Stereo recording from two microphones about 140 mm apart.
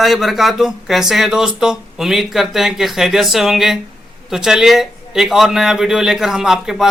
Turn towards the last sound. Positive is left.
turn(degrees=-5)  # may be behind; listen again after turning